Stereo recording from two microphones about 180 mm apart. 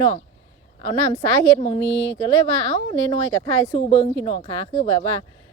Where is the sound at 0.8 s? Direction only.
25° left (ahead or behind).